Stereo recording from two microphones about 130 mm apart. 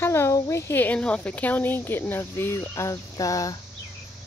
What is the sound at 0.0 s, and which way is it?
Speech, 20° left (ahead or behind).